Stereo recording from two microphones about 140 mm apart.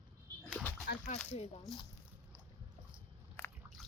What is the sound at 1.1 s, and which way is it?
Speech, 70° left (ahead or behind).